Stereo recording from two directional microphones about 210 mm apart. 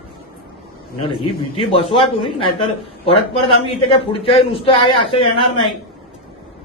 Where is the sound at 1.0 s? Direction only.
25° left (ahead or behind).